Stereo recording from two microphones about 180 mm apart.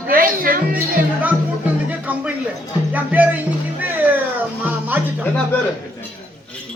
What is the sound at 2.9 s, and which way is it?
Speech, 10° right (ahead or behind).